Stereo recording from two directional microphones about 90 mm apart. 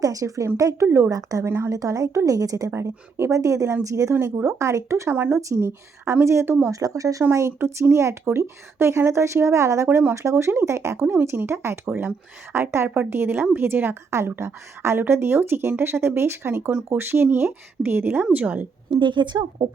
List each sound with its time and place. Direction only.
0.0 s speech: 40° right (ahead or behind)
0.9 s speech: 25° right (ahead or behind)
1.1 s speech: 40° right (ahead or behind)
1.5 s speech: 30° right (ahead or behind)
1.7 s speech: 40° right (ahead or behind)
5.1 s speech: 20° right (ahead or behind)
5.4 s speech: 35° right (ahead or behind)
6.7 s speech: 40° right (ahead or behind); by 18.9 s 15° right (ahead or behind)
18.9 s a woman's voice: 60° right (ahead or behind)